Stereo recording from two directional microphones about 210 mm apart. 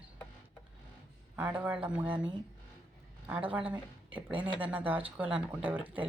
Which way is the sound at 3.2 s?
10° right (ahead or behind).